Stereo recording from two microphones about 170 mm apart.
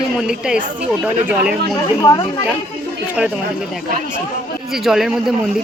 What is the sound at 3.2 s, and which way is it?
Speech, 5° right (ahead or behind).